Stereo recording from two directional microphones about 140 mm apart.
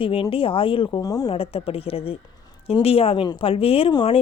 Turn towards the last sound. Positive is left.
turn(degrees=35)  # may be behind; listen again after turning